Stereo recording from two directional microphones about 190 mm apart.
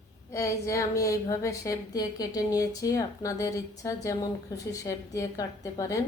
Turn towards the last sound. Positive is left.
turn(degrees=20)  # may be behind; listen again after turning